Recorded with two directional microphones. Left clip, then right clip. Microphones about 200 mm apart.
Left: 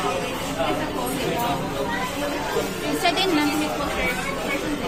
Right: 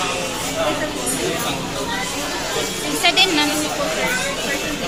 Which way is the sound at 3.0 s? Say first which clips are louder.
Right 6 dB; 15° left (ahead or behind).